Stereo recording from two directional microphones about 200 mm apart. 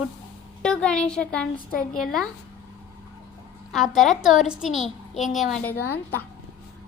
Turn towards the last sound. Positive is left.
turn(degrees=10)  # may be behind; listen again after turning